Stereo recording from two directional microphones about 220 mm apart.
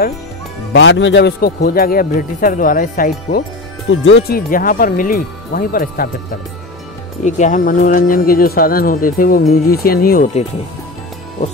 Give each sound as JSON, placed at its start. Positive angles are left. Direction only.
{"t": 0.7, "sound": "speech", "side_deg": 55}
{"t": 3.9, "sound": "speech", "side_deg": 60}
{"t": 4.3, "sound": "speech", "side_deg": 40}
{"t": 7.2, "sound": "speech", "side_deg": 35}